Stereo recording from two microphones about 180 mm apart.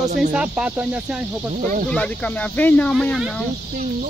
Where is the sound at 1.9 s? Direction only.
5° left (ahead or behind).